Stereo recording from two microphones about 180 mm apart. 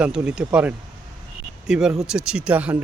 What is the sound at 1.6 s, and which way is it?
Speech, 5° right (ahead or behind).